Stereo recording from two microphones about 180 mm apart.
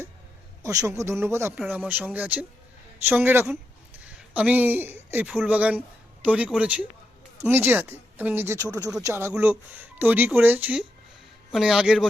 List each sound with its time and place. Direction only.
0.6 s a man's voice: 20° right (ahead or behind); by 12.0 s centre (ahead or behind)